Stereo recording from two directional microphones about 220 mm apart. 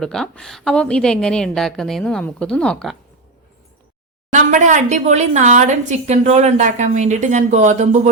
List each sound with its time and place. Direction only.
0.0 s a woman's voice: 5° left (ahead or behind)
4.3 s speech: 35° right (ahead or behind)